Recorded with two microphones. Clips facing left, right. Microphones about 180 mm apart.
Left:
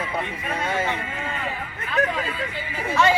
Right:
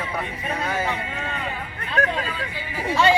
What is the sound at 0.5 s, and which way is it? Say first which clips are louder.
Speech: left 1 dB; 25° left (ahead or behind).